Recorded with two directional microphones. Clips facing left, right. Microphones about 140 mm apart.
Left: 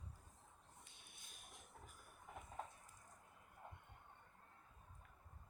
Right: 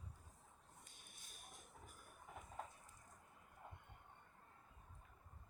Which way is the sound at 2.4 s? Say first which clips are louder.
Left 1 dB; centre (ahead or behind).